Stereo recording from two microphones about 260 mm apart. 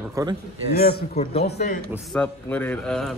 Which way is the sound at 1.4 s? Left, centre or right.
Left.